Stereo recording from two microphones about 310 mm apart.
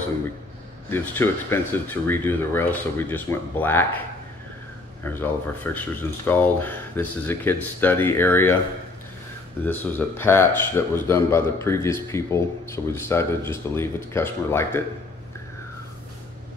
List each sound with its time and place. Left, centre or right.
0.8 s speech: centre
5.0 s speech: centre
9.7 s speech: centre